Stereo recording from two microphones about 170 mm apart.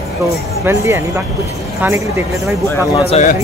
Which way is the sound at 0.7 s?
15° right (ahead or behind).